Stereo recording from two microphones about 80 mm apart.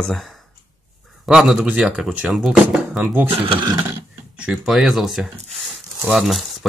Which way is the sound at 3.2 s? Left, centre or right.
Right.